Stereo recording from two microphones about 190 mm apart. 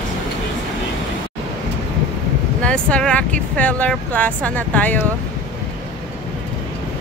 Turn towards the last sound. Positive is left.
turn(degrees=10)  # may be behind; listen again after turning